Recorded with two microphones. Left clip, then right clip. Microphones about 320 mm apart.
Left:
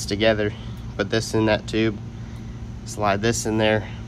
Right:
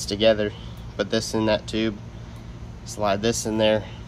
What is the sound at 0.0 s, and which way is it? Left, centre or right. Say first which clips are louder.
Speech: even; centre.